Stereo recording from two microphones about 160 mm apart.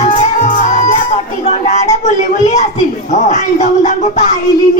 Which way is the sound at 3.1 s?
45° left (ahead or behind).